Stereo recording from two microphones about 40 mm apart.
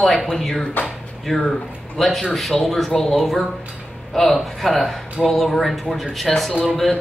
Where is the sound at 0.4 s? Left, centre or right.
Centre.